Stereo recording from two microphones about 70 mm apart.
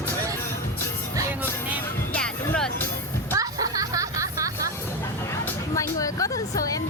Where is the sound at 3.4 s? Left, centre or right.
Right.